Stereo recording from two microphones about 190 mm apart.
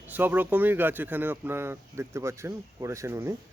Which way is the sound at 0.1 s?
10° right (ahead or behind).